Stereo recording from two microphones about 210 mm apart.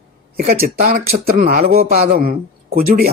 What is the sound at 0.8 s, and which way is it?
A man's voice, 45° right (ahead or behind).